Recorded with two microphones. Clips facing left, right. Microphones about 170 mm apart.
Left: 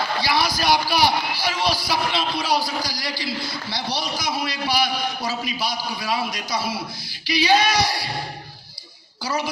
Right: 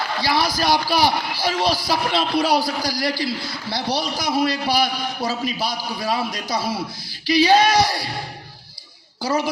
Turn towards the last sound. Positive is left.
turn(degrees=-50)  # may be behind; listen again after turning